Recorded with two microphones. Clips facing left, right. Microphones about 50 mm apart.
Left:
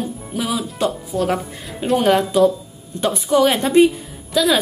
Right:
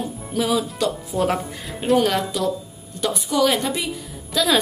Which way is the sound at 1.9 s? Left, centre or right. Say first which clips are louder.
Right 1 dB; centre.